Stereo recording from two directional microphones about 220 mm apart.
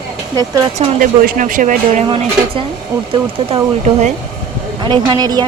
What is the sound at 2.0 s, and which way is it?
Speech, 25° right (ahead or behind).